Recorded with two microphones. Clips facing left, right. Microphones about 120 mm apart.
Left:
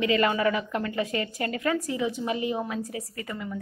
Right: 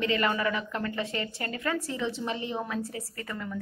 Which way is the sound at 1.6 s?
20° left (ahead or behind).